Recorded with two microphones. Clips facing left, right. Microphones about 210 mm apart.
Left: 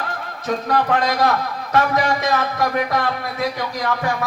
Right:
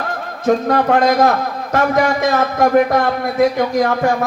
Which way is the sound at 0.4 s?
45° right (ahead or behind).